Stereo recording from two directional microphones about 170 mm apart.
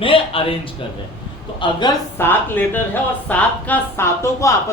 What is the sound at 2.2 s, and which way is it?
A woman's voice, 10° left (ahead or behind).